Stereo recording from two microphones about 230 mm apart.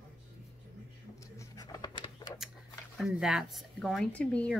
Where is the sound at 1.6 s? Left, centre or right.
Centre.